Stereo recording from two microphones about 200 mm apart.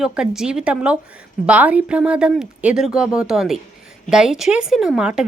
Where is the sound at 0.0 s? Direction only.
5° right (ahead or behind).